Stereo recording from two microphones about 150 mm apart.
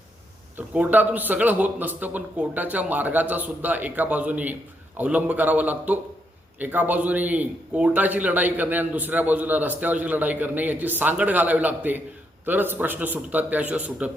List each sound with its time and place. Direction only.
0.5 s a man's voice: 10° right (ahead or behind)